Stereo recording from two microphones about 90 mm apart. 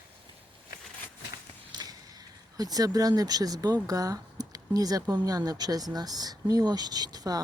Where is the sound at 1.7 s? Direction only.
45° right (ahead or behind).